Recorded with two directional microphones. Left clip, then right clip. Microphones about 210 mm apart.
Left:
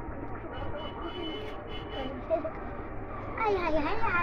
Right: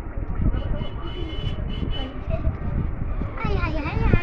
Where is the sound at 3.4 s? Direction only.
Centre (ahead or behind).